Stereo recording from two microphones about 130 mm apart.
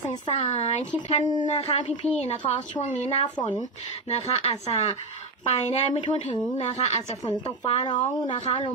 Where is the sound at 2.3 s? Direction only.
70° left (ahead or behind).